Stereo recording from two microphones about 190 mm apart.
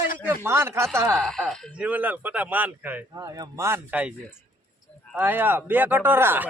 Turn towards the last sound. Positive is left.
turn(degrees=-10)  # may be behind; listen again after turning